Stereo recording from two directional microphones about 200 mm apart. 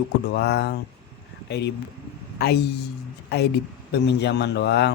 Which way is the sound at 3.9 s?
60° left (ahead or behind).